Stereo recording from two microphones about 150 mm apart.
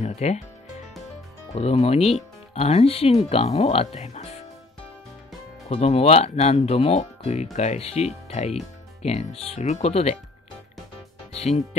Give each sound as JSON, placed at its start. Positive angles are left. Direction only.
{"t": 0.0, "sound": "music", "side_deg": 50}
{"t": 1.5, "sound": "speech", "side_deg": 45}
{"t": 5.7, "sound": "speech", "side_deg": 40}
{"t": 11.3, "sound": "speech", "side_deg": 45}